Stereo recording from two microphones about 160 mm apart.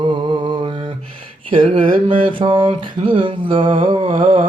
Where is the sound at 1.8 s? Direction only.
60° right (ahead or behind).